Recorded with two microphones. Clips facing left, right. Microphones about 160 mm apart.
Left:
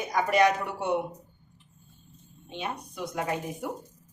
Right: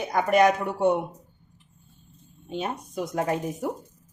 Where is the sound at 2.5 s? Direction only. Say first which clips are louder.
Right 5 dB; 45° right (ahead or behind).